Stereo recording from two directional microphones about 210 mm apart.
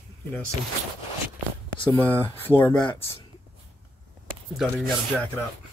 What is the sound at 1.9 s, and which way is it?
Speech, 10° left (ahead or behind).